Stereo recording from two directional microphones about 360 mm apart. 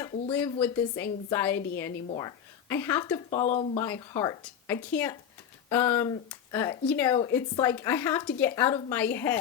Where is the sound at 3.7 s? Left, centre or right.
Centre.